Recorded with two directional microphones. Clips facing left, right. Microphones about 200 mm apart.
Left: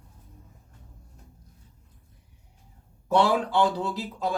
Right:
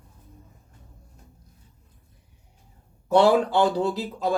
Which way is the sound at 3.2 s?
40° right (ahead or behind).